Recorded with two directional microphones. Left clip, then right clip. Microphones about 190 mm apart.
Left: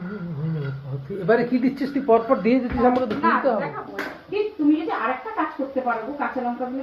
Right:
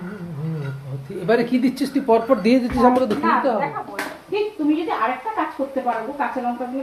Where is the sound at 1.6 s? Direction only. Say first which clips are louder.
Right 2 dB; 60° right (ahead or behind).